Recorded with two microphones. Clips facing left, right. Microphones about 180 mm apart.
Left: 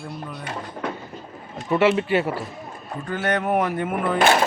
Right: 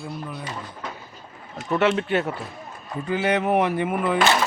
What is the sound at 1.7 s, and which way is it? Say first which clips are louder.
Speech: left 2 dB; 5° left (ahead or behind).